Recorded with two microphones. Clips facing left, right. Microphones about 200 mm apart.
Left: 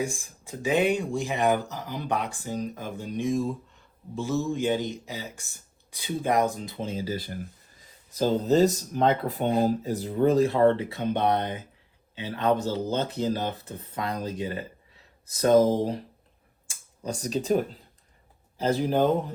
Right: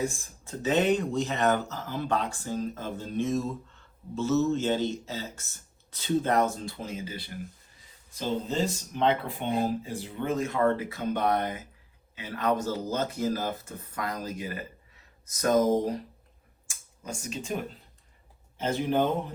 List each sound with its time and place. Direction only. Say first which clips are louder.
0.0 s speech: left 1 dB; 15° left (ahead or behind)
6.8 s speech: left 6 dB; 35° left (ahead or behind)
17.1 s speech: left 9 dB; 35° left (ahead or behind)